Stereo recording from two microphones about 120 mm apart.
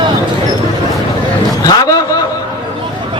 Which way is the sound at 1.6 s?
30° left (ahead or behind).